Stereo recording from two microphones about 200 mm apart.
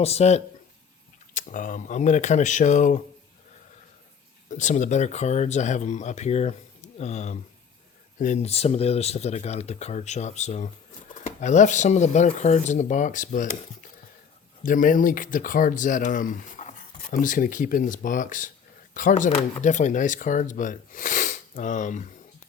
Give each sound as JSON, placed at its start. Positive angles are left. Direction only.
{"t": 0.0, "sound": "speech", "side_deg": 30}
{"t": 4.4, "sound": "speech", "side_deg": 35}
{"t": 14.6, "sound": "speech", "side_deg": 40}